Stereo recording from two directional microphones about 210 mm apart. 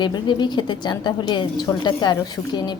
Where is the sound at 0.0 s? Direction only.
20° left (ahead or behind).